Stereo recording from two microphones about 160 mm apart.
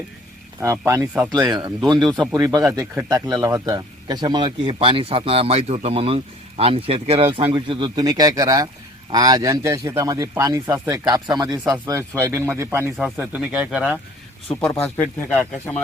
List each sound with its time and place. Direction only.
0.6 s speech: 20° right (ahead or behind)
1.3 s speech: 25° right (ahead or behind); by 14.0 s 5° right (ahead or behind)
14.7 s speech: 10° left (ahead or behind)